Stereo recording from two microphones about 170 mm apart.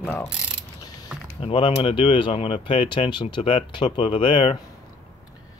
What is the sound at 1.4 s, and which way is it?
Speech, 30° left (ahead or behind).